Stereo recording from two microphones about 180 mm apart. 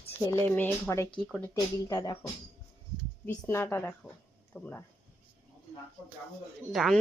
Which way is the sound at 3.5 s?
15° left (ahead or behind).